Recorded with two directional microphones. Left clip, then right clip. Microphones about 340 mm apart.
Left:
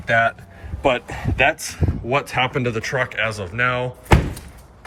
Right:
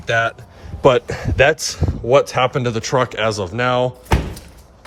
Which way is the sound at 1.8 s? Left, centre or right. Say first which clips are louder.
Right 1 dB; left.